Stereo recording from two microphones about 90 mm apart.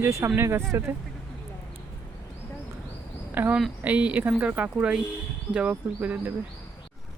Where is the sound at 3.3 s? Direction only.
20° right (ahead or behind).